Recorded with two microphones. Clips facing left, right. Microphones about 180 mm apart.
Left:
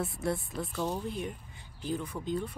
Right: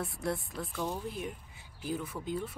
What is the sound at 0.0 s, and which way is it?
A woman's voice, centre (ahead or behind).